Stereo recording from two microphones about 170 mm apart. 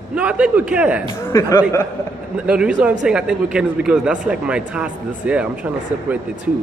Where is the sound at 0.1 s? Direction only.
5° right (ahead or behind).